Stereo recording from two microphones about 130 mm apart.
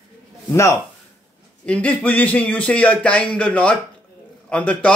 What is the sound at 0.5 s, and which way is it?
Speech, 25° left (ahead or behind).